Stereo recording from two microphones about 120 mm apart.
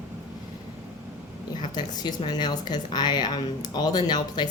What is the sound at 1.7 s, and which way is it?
Speech, 40° left (ahead or behind).